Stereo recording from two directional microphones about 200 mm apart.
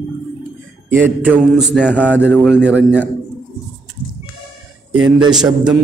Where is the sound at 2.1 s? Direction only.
10° left (ahead or behind).